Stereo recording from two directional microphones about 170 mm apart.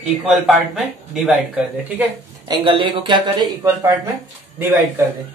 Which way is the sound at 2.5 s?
30° right (ahead or behind).